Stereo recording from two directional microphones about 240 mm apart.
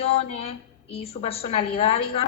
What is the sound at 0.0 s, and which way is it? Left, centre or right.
A woman's voice, left.